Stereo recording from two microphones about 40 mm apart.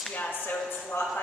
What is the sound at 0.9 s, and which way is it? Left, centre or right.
Speech, left.